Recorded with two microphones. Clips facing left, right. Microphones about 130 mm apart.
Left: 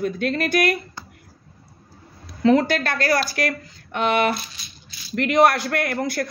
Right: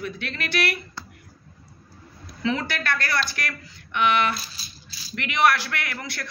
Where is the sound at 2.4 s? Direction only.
50° left (ahead or behind).